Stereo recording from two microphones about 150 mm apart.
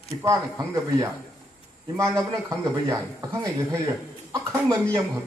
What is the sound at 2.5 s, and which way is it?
A man's voice, 25° right (ahead or behind).